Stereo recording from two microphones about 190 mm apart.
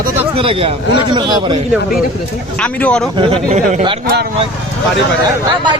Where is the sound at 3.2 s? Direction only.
35° right (ahead or behind).